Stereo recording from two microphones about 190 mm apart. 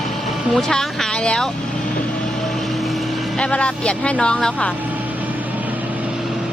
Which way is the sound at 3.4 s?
5° left (ahead or behind).